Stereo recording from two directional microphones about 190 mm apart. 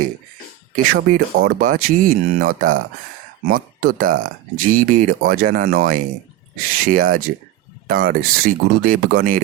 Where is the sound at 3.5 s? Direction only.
50° right (ahead or behind).